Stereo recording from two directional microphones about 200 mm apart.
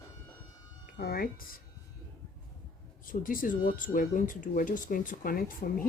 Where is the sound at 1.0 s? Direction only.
50° left (ahead or behind).